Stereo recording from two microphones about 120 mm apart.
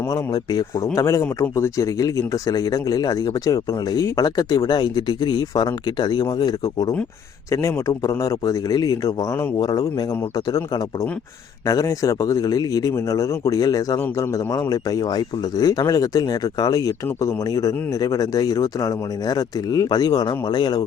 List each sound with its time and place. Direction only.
0.1 s a man's voice: 30° left (ahead or behind)
11.6 s speech: 30° left (ahead or behind)